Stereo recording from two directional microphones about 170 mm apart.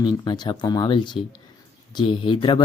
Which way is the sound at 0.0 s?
25° left (ahead or behind).